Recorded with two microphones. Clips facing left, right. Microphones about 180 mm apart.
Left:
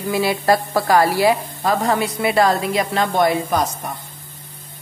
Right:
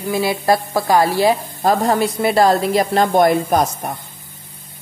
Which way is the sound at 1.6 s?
40° right (ahead or behind).